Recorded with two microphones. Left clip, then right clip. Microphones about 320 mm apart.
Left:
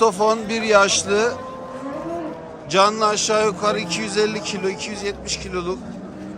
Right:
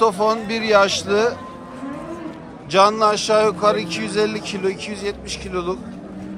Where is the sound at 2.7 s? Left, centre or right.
Centre.